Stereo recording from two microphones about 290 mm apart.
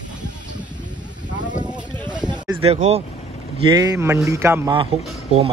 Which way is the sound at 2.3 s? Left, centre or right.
Centre.